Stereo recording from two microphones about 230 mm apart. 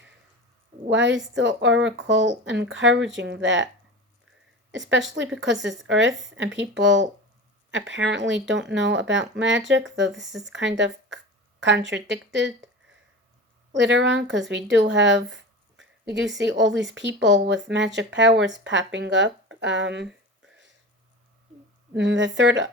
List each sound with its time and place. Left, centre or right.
0.9 s speech: right
5.2 s speech: right
13.7 s speech: right
16.4 s speech: right
21.9 s speech: right